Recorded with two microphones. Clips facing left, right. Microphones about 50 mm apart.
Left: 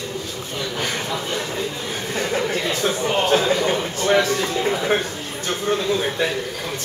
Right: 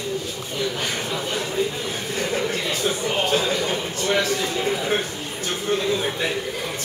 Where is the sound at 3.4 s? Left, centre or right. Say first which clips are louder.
Left 4 dB; left.